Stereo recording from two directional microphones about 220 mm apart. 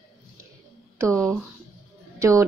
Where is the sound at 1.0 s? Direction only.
15° right (ahead or behind).